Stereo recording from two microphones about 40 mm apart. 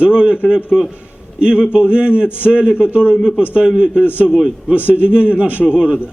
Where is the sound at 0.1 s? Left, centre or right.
Right.